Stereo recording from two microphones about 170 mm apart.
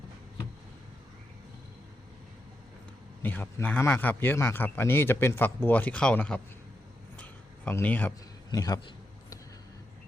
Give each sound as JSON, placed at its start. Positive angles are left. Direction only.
{"t": 3.2, "sound": "a man's voice", "side_deg": 10}
{"t": 7.2, "sound": "a sound", "side_deg": 10}
{"t": 8.4, "sound": "a man's voice", "side_deg": 20}